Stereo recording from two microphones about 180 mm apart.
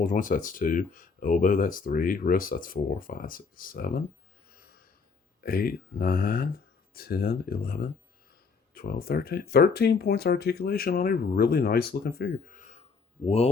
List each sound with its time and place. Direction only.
0.0 s speech: 45° left (ahead or behind)
4.5 s snort: 55° left (ahead or behind)
5.4 s speech: 55° left (ahead or behind); by 13.5 s 35° left (ahead or behind)